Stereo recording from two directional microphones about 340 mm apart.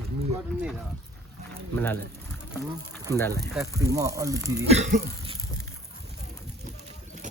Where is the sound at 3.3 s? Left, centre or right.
Centre.